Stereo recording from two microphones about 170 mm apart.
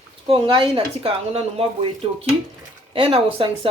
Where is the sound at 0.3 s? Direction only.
35° right (ahead or behind).